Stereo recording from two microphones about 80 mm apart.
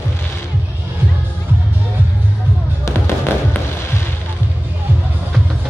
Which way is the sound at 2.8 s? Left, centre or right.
Left.